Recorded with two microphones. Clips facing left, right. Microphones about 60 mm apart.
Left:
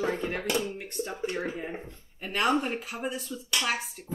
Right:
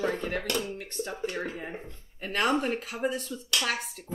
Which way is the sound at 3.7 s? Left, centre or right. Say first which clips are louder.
Left 2 dB; centre.